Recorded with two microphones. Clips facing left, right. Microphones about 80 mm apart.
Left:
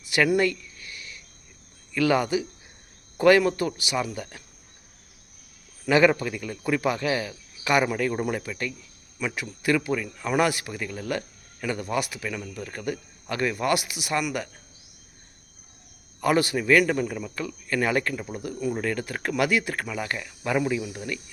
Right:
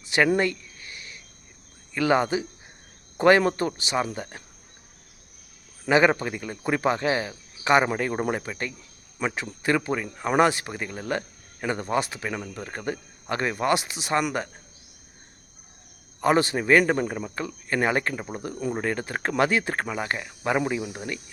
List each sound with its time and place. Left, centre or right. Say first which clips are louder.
0.0 s a sound: even; right
1.9 s a man's voice: even; right
5.8 s a man's voice: even; right
16.2 s a man's voice: right 1 dB; right